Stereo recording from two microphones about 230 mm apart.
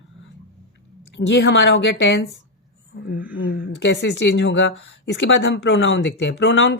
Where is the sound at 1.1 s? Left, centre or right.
Left.